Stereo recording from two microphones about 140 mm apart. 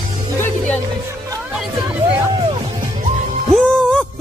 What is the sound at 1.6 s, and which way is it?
Hubbub, 10° right (ahead or behind).